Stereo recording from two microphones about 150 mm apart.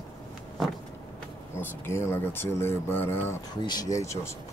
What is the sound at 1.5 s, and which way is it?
Speech, 15° left (ahead or behind).